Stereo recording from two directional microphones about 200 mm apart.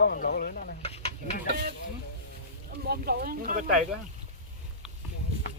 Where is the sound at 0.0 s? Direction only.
50° left (ahead or behind).